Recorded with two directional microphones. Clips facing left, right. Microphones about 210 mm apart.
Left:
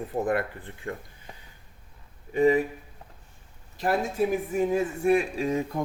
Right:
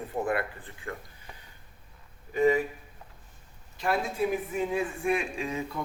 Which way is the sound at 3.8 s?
45° left (ahead or behind).